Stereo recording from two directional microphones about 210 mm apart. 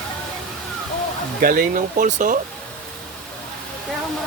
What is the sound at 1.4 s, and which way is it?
Speech, 40° right (ahead or behind).